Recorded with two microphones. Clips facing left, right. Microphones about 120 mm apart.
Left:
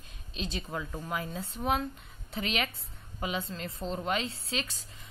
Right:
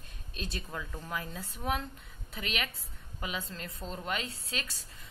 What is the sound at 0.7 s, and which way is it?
A woman's voice, 20° left (ahead or behind).